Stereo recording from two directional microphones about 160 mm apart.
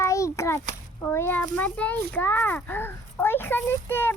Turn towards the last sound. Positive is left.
turn(degrees=15)  # may be behind; listen again after turning